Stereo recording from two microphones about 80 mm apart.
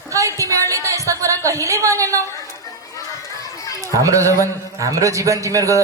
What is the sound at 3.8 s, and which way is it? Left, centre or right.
A man's voice, right.